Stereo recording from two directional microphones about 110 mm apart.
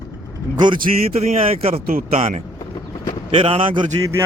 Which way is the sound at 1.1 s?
80° right.